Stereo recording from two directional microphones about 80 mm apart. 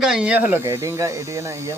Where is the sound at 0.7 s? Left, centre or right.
Right.